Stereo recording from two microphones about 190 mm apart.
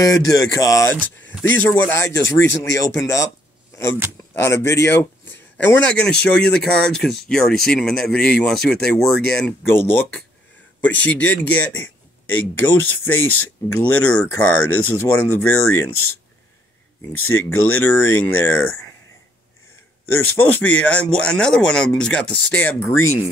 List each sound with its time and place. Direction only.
0.0 s speech: 20° left (ahead or behind)
4.4 s speech: 10° left (ahead or behind)
17.2 s speech: 90° left
17.7 s speech: 10° left (ahead or behind)
20.3 s speech: 10° left (ahead or behind)